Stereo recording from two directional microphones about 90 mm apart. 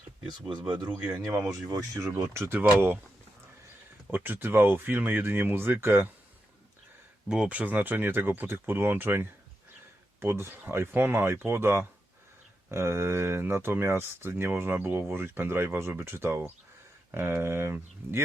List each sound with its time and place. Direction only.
0.3 s speech: 55° right (ahead or behind)
1.7 s speech: 40° right (ahead or behind)
2.2 s speech: 25° right (ahead or behind)
4.1 s speech: 20° right (ahead or behind)
7.3 s speech: 10° right (ahead or behind); by 18.2 s 30° right (ahead or behind)